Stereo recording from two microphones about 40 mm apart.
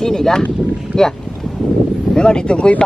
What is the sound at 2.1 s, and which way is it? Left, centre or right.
Speech, left.